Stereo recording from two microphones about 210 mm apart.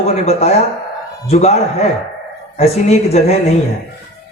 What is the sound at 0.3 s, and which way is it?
A man's voice, 30° left (ahead or behind).